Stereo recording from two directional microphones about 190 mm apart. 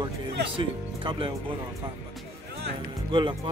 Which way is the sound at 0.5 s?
25° right (ahead or behind).